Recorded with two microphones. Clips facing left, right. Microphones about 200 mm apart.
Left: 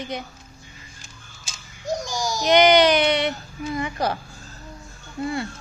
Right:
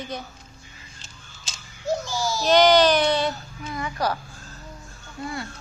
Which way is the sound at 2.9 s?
20° left (ahead or behind).